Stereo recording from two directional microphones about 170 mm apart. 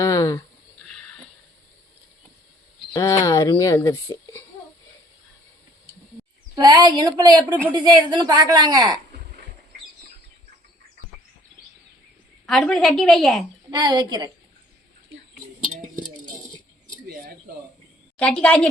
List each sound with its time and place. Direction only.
0.0 s a sound: 20° left (ahead or behind)
2.9 s speech: 20° left (ahead or behind)
6.6 s a woman's voice: 25° right (ahead or behind)
12.5 s a woman's voice: centre (ahead or behind)
13.7 s a woman's voice: 25° right (ahead or behind)
18.2 s speech: 5° left (ahead or behind)